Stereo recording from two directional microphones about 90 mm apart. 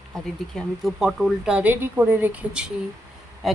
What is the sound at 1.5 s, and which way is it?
A woman's voice, 20° right (ahead or behind).